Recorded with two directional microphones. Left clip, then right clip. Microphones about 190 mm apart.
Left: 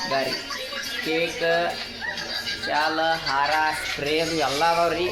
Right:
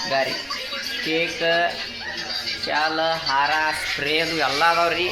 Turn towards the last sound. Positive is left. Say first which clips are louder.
# right 2 dB
turn(degrees=0)  # may be behind; listen again after turning